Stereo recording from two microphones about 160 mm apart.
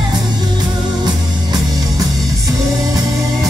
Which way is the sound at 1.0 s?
25° right (ahead or behind).